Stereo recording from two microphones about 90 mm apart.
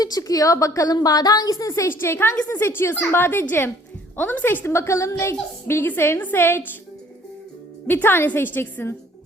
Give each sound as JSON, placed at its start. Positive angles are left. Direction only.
{"t": 0.0, "sound": "a woman's voice", "side_deg": 45}
{"t": 7.9, "sound": "a woman's voice", "side_deg": 20}